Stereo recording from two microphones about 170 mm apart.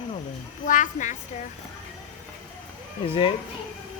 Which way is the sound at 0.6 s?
50° left (ahead or behind).